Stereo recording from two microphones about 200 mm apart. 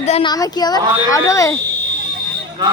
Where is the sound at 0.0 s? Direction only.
30° left (ahead or behind).